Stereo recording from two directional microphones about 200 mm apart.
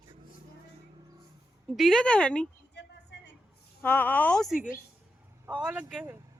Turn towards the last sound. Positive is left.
turn(degrees=-5)  # may be behind; listen again after turning